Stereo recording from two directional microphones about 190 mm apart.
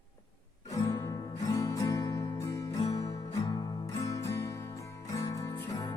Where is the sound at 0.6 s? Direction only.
20° left (ahead or behind).